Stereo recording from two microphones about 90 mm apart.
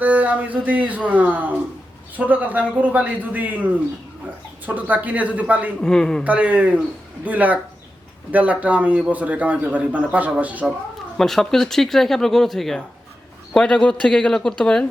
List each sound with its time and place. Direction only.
0.0 s a man's voice: 20° right (ahead or behind)
5.8 s a man's voice: 10° left (ahead or behind)
6.2 s a man's voice: 15° right (ahead or behind)
11.2 s a man's voice: 5° left (ahead or behind)